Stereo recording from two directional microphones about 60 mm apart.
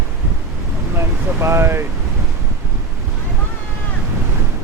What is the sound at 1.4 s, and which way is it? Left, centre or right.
Speech, right.